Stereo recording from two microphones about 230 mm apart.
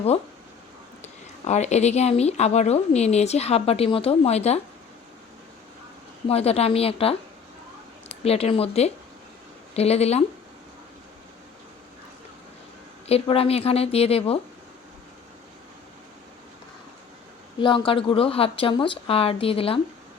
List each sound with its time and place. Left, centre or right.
1.0 s speech: left
6.2 s speech: left
8.2 s speech: left
13.1 s speech: left
17.6 s speech: left